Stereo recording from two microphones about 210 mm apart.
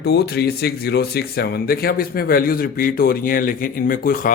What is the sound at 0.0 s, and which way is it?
A man's voice, 50° left (ahead or behind).